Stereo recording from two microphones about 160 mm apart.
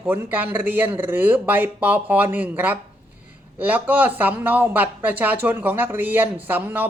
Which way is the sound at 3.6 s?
10° right (ahead or behind).